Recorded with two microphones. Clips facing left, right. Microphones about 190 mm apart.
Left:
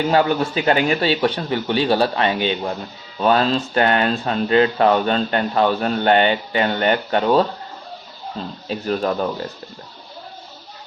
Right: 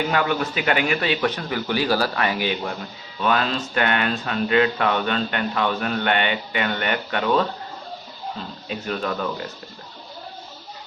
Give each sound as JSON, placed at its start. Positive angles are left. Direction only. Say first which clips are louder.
{"t": 0.1, "sound": "a man's voice", "louder": "left 5 dB", "side_deg": 30}
{"t": 8.6, "sound": "speech", "louder": "left 6 dB", "side_deg": 35}